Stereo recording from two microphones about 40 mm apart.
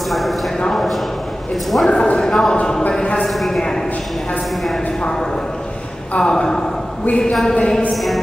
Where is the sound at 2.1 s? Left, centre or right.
Centre.